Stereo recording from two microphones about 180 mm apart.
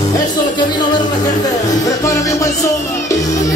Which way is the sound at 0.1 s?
25° left (ahead or behind).